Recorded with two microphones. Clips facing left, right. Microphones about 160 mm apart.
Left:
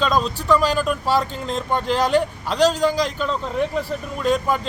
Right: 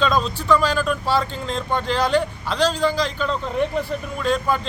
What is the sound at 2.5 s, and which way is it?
Speech, 45° left (ahead or behind).